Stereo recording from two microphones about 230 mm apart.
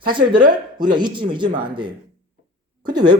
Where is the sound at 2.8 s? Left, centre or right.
Centre.